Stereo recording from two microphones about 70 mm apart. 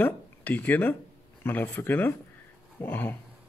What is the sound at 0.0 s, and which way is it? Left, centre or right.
Speech, left.